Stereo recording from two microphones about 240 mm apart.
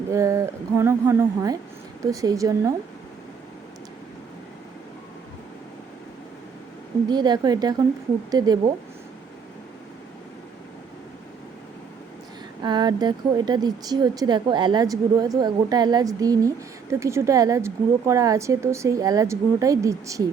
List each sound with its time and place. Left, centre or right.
0.1 s speech: centre
7.1 s speech: centre
12.6 s speech: centre